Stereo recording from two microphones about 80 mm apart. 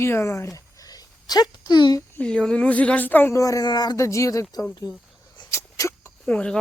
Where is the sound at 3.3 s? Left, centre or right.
Left.